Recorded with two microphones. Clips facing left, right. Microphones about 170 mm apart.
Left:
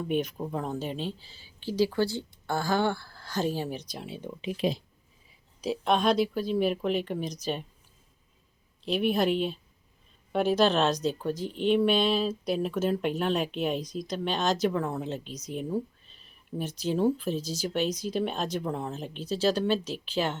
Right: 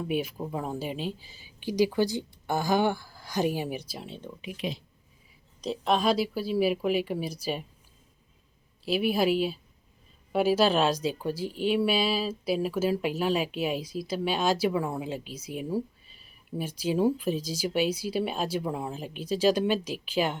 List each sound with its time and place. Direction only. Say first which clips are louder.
0.0 s speech: left 1 dB; 5° right (ahead or behind)
4.4 s speech: left 6 dB; 30° left (ahead or behind)
5.6 s speech: even; centre (ahead or behind)
8.8 s speech: even; 5° right (ahead or behind)